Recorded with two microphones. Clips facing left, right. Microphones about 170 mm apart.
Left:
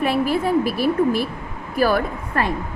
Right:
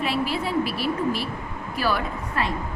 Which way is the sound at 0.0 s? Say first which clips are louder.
Left 6 dB; 50° left (ahead or behind).